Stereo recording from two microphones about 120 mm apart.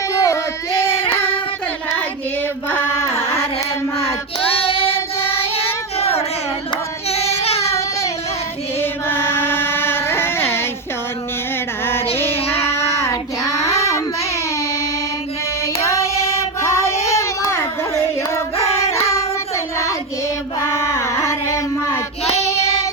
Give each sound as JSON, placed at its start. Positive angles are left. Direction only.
{"t": 0.1, "sound": "a sound", "side_deg": 25}
{"t": 0.9, "sound": "child singing", "side_deg": 50}
{"t": 2.6, "sound": "carnatic music", "side_deg": 15}
{"t": 3.9, "sound": "child singing", "side_deg": 55}
{"t": 8.8, "sound": "chant", "side_deg": 20}
{"t": 12.1, "sound": "female singing", "side_deg": 20}
{"t": 12.4, "sound": "child singing", "side_deg": 55}
{"t": 15.6, "sound": "child singing", "side_deg": 25}
{"t": 16.8, "sound": "child singing", "side_deg": 60}
{"t": 17.1, "sound": "a sound", "side_deg": 25}
{"t": 19.1, "sound": "child singing", "side_deg": 25}
{"t": 22.2, "sound": "child singing", "side_deg": 60}